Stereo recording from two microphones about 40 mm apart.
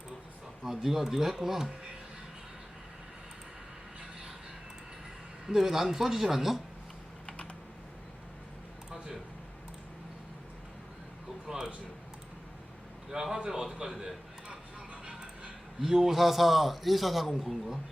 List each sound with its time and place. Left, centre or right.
0.6 s a man's voice: centre
5.5 s a man's voice: centre
11.4 s speech: centre
13.1 s a man's voice: centre
15.0 s music: centre
15.8 s a man's voice: centre